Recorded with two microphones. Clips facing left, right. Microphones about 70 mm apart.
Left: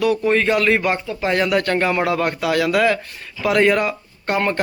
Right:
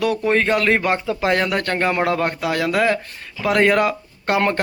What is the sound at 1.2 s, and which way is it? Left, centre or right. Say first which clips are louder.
Speech: even; right.